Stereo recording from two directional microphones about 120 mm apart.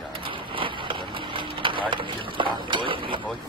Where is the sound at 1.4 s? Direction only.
45° right (ahead or behind).